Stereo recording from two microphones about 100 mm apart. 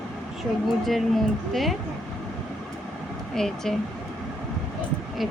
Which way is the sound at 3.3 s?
5° left (ahead or behind).